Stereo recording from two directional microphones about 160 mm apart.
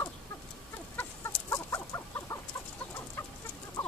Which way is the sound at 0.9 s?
15° left (ahead or behind).